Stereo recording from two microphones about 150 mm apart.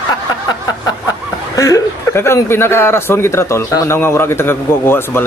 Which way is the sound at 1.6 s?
20° left (ahead or behind).